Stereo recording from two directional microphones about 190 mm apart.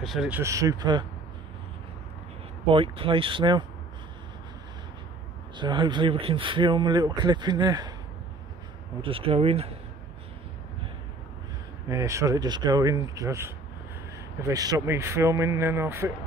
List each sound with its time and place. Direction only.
0.0 s speech: centre (ahead or behind)
0.4 s speech: 15° right (ahead or behind)
2.7 s speech: 30° right (ahead or behind)
5.6 s speech: 25° right (ahead or behind)
9.0 s speech: 30° right (ahead or behind)
11.9 s speech: 15° right (ahead or behind)